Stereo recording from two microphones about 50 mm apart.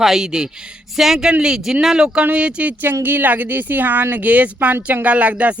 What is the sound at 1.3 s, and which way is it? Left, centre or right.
Speech, centre.